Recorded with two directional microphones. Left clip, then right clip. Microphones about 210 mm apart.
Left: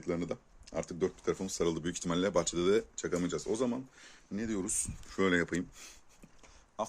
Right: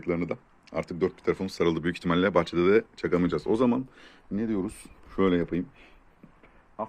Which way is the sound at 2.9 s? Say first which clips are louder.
Right 8 dB; 25° right (ahead or behind).